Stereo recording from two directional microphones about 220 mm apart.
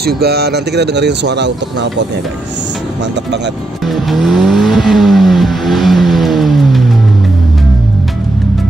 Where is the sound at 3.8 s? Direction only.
Centre (ahead or behind).